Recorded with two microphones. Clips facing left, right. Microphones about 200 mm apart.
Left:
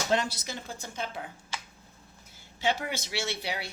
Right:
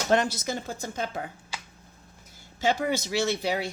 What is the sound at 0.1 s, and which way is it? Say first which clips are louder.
Speech: right 7 dB; 50° right (ahead or behind).